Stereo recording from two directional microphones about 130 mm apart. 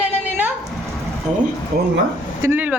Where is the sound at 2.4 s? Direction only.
15° right (ahead or behind).